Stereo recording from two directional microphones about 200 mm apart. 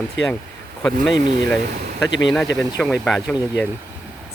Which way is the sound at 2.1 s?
65° left (ahead or behind).